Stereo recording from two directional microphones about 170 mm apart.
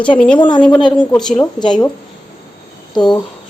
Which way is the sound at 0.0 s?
5° left (ahead or behind).